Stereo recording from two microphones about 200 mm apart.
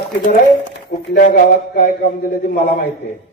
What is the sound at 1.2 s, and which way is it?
Speech, 40° left (ahead or behind).